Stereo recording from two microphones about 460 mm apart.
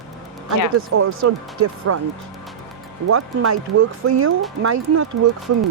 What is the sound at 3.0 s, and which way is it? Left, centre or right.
Speech, right.